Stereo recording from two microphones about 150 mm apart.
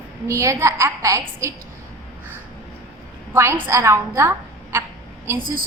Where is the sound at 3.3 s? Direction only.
20° right (ahead or behind).